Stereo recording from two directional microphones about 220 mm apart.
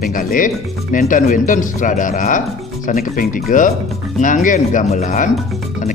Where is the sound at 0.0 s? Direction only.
40° left (ahead or behind).